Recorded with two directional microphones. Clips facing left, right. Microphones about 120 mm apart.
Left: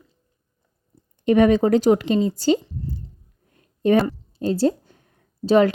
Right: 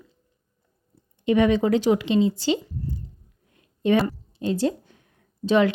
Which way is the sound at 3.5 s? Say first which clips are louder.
Left 3 dB; 40° left (ahead or behind).